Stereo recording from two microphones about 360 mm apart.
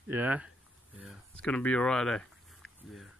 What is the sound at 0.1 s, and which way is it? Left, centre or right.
Speech, centre.